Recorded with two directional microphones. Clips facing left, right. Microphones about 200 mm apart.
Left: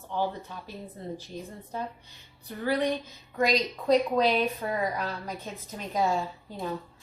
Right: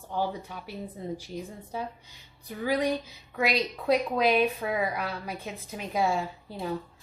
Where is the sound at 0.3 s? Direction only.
15° right (ahead or behind).